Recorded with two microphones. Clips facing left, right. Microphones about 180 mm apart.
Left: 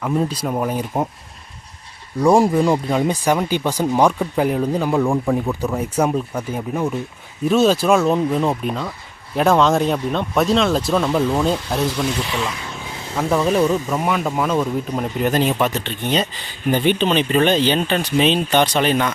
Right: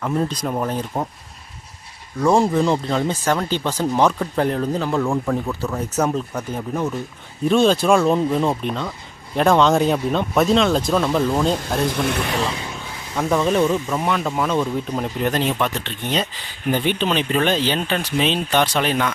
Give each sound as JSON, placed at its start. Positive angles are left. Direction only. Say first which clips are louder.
{"t": 0.0, "sound": "speech", "louder": "left 1 dB", "side_deg": 5}
{"t": 2.4, "sound": "speech", "louder": "left 2 dB", "side_deg": 10}
{"t": 11.9, "sound": "speech", "louder": "even", "side_deg": -55}
{"t": 13.1, "sound": "speech", "louder": "left 1 dB", "side_deg": 0}